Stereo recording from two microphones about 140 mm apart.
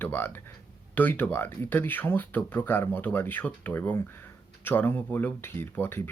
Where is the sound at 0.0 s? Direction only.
15° left (ahead or behind).